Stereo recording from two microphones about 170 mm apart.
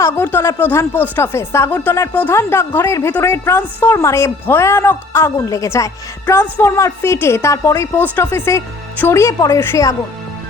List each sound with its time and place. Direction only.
0.0 s speech: 15° left (ahead or behind)